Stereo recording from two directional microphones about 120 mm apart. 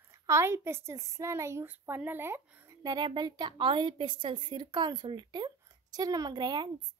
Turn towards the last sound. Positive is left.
turn(degrees=-40)  # may be behind; listen again after turning